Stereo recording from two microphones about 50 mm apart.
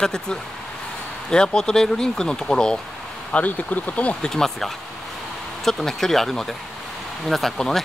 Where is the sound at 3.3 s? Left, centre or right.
Left.